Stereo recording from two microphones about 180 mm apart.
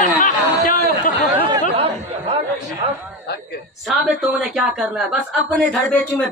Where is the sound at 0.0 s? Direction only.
45° left (ahead or behind).